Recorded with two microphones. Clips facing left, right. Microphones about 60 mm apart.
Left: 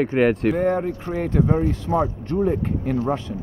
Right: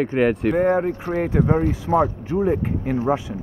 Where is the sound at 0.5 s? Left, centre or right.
Centre.